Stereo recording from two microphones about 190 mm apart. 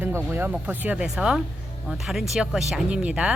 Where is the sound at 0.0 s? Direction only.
10° right (ahead or behind).